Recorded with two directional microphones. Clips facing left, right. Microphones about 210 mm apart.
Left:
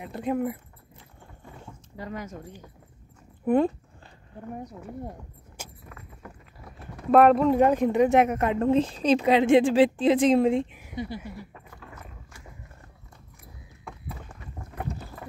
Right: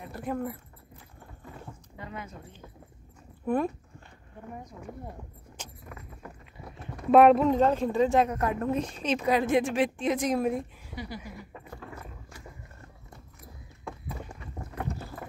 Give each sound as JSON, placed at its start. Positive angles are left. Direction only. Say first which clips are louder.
{"t": 0.0, "sound": "a woman's voice", "louder": "left 5 dB", "side_deg": 20}
{"t": 2.0, "sound": "speech", "louder": "left 6 dB", "side_deg": 40}
{"t": 3.4, "sound": "a woman's voice", "louder": "left 6 dB", "side_deg": 25}
{"t": 5.6, "sound": "vehicle", "louder": "left 2 dB", "side_deg": 10}
{"t": 7.1, "sound": "speech", "louder": "left 1 dB", "side_deg": 0}
{"t": 7.5, "sound": "a woman's voice", "louder": "left 3 dB", "side_deg": 15}
{"t": 10.9, "sound": "a sound", "louder": "left 5 dB", "side_deg": 25}